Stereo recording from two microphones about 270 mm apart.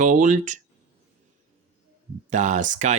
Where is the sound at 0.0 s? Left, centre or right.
Right.